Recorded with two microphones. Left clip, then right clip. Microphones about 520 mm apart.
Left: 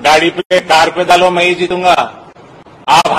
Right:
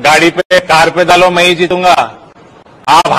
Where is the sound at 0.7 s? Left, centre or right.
Right.